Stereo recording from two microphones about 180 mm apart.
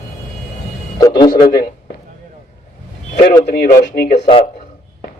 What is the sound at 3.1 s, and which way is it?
Speech, 40° left (ahead or behind).